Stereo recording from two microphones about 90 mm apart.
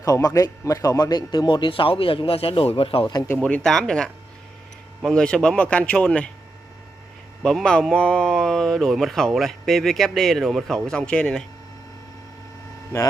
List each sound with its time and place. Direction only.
0.0 s speech: 40° left (ahead or behind); by 3.1 s 90° left
3.4 s speech: 10° left (ahead or behind)
5.1 s speech: 10° left (ahead or behind)
7.4 s a man's voice: 5° left (ahead or behind)